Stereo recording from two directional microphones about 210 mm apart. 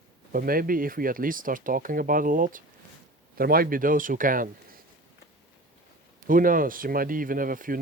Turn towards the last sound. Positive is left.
turn(degrees=-40)  # may be behind; listen again after turning